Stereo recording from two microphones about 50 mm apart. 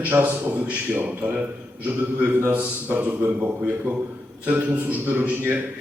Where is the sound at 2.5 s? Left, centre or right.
Right.